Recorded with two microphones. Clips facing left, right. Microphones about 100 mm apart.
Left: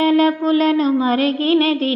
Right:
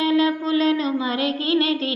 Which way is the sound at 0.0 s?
45° left (ahead or behind).